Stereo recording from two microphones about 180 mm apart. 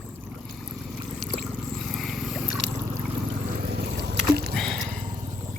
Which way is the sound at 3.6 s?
65° right (ahead or behind).